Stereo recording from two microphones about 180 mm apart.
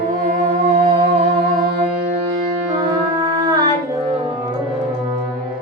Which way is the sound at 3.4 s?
20° right (ahead or behind).